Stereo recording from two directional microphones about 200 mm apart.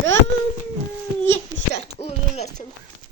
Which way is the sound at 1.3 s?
70° right (ahead or behind).